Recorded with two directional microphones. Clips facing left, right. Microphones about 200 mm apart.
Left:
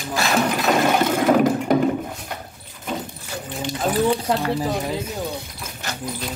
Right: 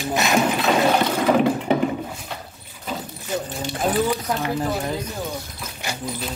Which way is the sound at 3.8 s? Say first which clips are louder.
Left 2 dB; centre (ahead or behind).